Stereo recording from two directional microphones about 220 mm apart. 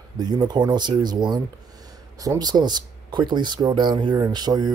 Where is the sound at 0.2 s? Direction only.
20° right (ahead or behind).